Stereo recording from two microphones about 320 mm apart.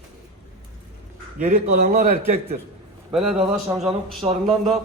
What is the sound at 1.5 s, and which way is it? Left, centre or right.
Speech, right.